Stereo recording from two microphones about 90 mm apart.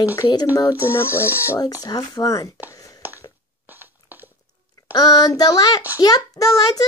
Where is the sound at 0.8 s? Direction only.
25° left (ahead or behind).